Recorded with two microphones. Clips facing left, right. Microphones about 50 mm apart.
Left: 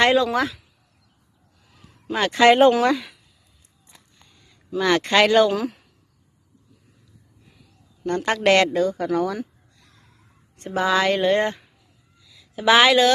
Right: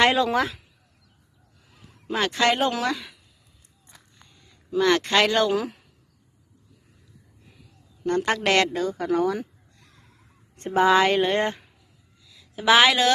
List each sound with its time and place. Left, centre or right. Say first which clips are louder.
0.0 s speech: left 2 dB; centre
2.1 s speech: left 2 dB; centre
2.5 s speech: left 13 dB; left
2.7 s speech: left 7 dB; centre
4.7 s speech: left 1 dB; centre
8.0 s speech: left 3 dB; centre
9.8 s gasp: even; centre
10.7 s speech: right 2 dB; centre
11.2 s a woman's voice: left 3 dB; centre